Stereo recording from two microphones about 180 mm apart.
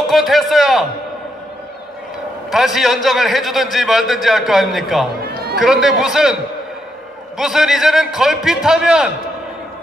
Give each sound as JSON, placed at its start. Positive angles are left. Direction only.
{"t": 0.1, "sound": "a man's voice", "side_deg": 0}
{"t": 2.5, "sound": "a man's voice", "side_deg": 0}
{"t": 5.2, "sound": "run", "side_deg": -60}
{"t": 5.6, "sound": "a man's voice", "side_deg": 0}
{"t": 7.3, "sound": "a man's voice", "side_deg": -5}